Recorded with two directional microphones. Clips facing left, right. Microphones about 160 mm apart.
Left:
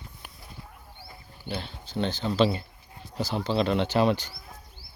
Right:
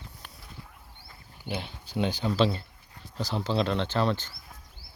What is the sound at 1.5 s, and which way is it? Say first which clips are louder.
Speech: even; 15° right (ahead or behind).